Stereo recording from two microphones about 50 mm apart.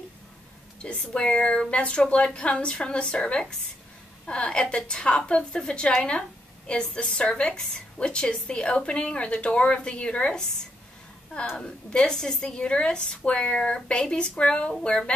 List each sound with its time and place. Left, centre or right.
0.8 s a woman's voice: left
11.5 s a woman's voice: centre